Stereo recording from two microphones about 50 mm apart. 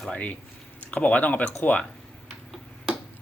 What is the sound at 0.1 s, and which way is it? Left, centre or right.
Speech, left.